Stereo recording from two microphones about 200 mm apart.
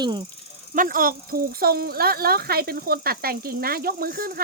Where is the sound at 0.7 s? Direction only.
45° right (ahead or behind).